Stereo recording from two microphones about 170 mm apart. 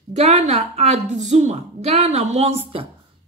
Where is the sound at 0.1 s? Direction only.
40° right (ahead or behind).